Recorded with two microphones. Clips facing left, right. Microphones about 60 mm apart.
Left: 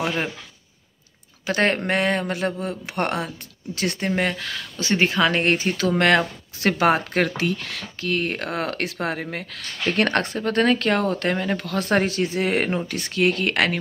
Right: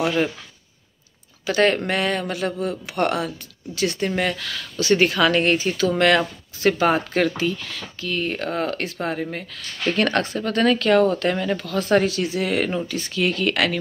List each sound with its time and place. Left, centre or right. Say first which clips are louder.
1.4 s speech: right 2 dB; left
4.1 s speech: even; left
5.4 s speech: right 1 dB; left
7.3 s speech: even; left
9.9 s speech: even; left
11.9 s speech: right 2 dB; left